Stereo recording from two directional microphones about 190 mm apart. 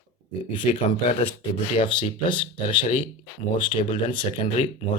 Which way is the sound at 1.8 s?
25° left (ahead or behind).